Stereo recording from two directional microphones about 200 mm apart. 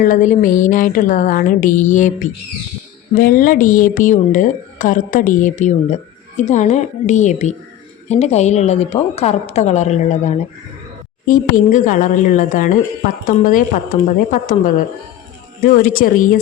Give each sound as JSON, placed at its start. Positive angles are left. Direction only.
{"t": 0.0, "sound": "a woman's voice", "side_deg": 40}